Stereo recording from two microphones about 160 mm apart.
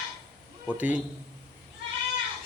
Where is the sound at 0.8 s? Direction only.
10° right (ahead or behind).